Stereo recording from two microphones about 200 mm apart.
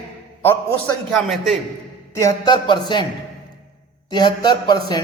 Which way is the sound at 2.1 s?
20° left (ahead or behind).